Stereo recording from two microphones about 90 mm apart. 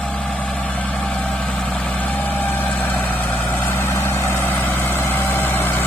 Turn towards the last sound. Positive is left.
turn(degrees=25)  # may be behind; listen again after turning